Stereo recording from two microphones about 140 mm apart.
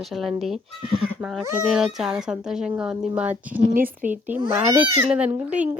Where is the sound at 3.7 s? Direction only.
80° right.